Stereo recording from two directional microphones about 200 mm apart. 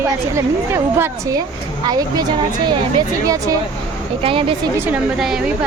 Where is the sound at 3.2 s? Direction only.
15° right (ahead or behind).